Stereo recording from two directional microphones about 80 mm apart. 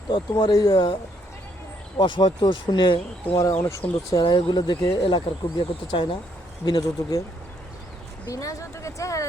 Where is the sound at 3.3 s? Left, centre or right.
Left.